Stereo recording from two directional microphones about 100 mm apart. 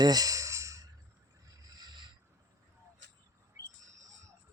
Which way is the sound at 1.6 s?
45° right (ahead or behind).